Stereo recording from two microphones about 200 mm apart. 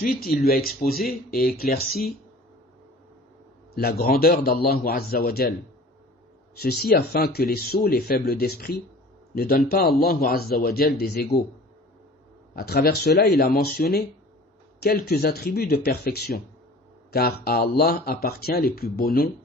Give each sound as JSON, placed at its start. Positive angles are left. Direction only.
{"t": 0.0, "sound": "speech", "side_deg": 50}
{"t": 3.8, "sound": "speech", "side_deg": 50}
{"t": 6.6, "sound": "speech", "side_deg": 50}
{"t": 12.5, "sound": "speech", "side_deg": 50}